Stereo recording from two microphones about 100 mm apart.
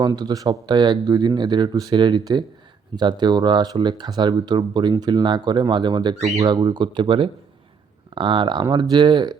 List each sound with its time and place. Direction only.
0.0 s speech: 45° right (ahead or behind)